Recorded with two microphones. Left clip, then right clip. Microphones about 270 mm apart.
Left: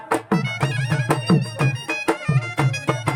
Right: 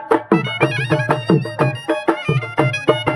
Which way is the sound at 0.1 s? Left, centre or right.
Right.